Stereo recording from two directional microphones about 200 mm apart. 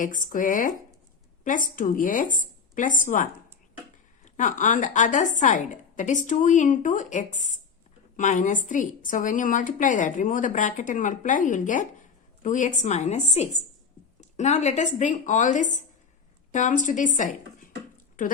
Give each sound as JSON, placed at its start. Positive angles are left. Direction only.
{"t": 0.3, "sound": "a woman's voice", "side_deg": 40}
{"t": 4.4, "sound": "a woman's voice", "side_deg": 40}